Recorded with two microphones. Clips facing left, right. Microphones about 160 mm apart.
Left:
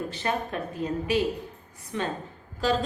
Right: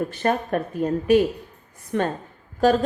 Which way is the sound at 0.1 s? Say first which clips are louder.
Right 7 dB; 50° right (ahead or behind).